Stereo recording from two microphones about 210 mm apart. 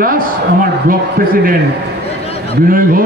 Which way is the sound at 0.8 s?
40° right (ahead or behind).